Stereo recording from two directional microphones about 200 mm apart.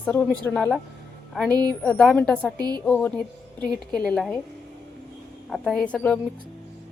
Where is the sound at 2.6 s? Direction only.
20° right (ahead or behind).